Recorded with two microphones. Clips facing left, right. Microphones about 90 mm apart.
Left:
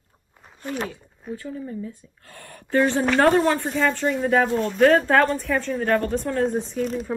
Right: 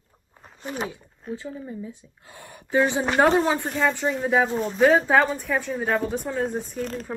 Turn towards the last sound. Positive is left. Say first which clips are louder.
# left 4 dB
turn(degrees=5)  # may be behind; listen again after turning